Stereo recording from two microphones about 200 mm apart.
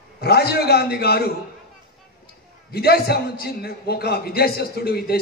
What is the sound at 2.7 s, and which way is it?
A man's voice, 50° left (ahead or behind).